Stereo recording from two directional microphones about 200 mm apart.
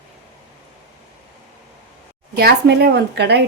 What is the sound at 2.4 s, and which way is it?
A woman's voice, 55° right (ahead or behind).